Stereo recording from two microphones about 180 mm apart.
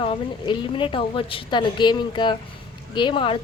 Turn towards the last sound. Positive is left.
turn(degrees=25)  # may be behind; listen again after turning